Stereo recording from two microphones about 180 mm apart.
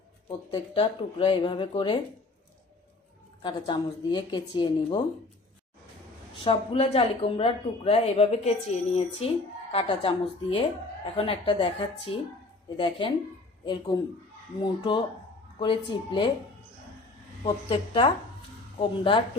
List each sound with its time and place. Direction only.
0.3 s speech: 30° left (ahead or behind)
3.4 s speech: 25° left (ahead or behind)
6.4 s speech: 30° left (ahead or behind)
17.4 s speech: 30° left (ahead or behind)